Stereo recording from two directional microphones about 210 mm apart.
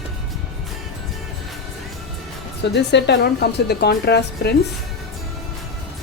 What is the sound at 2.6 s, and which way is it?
A woman's voice, 55° left (ahead or behind).